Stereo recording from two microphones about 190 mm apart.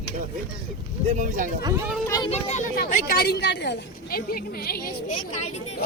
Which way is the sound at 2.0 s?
20° left (ahead or behind).